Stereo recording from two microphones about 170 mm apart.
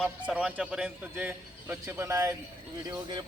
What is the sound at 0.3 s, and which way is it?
A man's voice, 5° right (ahead or behind).